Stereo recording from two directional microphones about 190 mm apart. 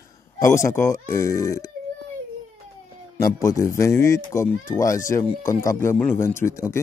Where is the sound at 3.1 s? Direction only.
15° left (ahead or behind).